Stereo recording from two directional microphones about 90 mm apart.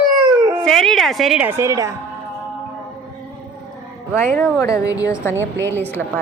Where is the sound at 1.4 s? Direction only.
25° right (ahead or behind).